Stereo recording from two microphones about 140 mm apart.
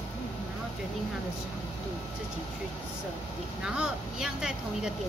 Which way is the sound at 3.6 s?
5° right (ahead or behind).